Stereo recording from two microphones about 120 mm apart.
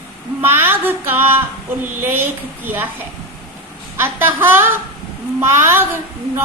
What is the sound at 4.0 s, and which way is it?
A woman's voice, 20° right (ahead or behind).